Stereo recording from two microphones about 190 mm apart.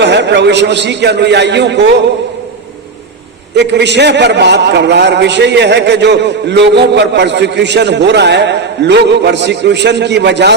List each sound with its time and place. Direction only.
0.0 s a man's voice: 65° right (ahead or behind)
3.5 s a man's voice: 65° right (ahead or behind)